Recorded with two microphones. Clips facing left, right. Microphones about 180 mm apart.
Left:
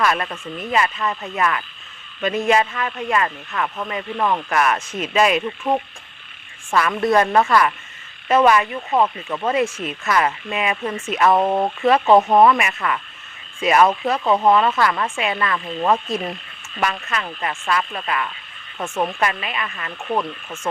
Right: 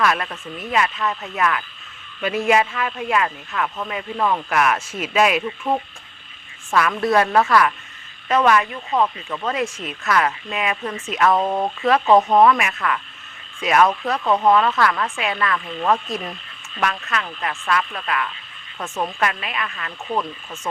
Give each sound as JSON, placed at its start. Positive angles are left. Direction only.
{"t": 0.0, "sound": "speech", "side_deg": 0}
{"t": 3.5, "sound": "speech", "side_deg": 10}
{"t": 3.8, "sound": "speech", "side_deg": 0}
{"t": 11.3, "sound": "speech", "side_deg": 20}
{"t": 11.9, "sound": "speech", "side_deg": 0}